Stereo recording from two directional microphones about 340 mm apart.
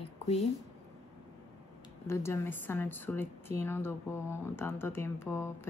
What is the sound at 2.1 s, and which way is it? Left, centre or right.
Speech, centre.